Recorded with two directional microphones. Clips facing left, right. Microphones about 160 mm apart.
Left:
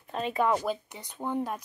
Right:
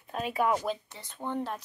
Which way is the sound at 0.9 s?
20° left (ahead or behind).